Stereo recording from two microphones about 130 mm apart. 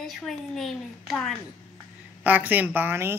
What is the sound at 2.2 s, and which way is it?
Speech, 10° right (ahead or behind).